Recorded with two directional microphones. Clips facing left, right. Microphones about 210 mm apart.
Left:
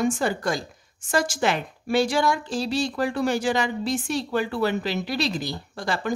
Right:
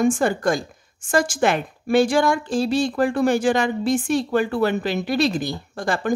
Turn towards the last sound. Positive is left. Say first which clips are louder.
# right 4 dB
turn(degrees=-50)  # may be behind; listen again after turning